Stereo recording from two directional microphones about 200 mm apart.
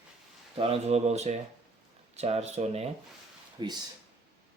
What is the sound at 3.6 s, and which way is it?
Speech, 20° right (ahead or behind).